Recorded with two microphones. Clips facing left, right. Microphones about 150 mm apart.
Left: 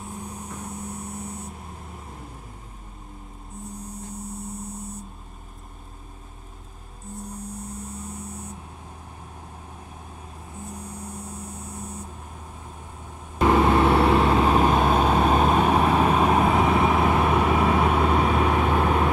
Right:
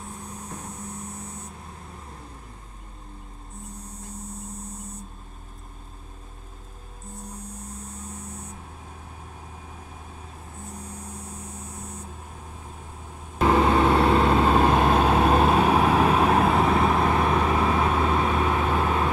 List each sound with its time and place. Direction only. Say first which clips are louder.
13.5 s vehicle: left 1 dB; 10° left (ahead or behind)